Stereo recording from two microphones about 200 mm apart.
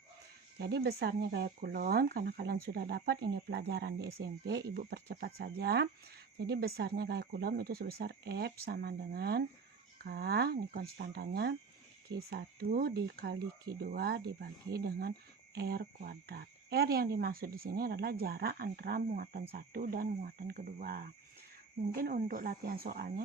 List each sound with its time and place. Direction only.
0.6 s speech: 55° right (ahead or behind)